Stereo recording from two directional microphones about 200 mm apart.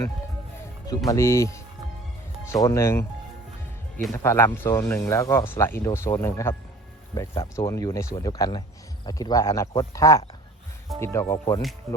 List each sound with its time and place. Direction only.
0.9 s speech: 15° left (ahead or behind)
4.1 s speech: 15° left (ahead or behind)